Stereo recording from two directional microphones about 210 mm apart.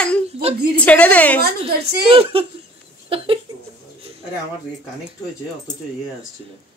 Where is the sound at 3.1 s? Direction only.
25° right (ahead or behind).